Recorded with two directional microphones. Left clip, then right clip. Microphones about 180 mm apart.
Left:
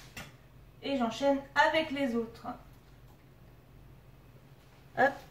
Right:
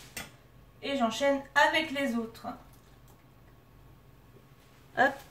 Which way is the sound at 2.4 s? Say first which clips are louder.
Right 1 dB; 45° right (ahead or behind).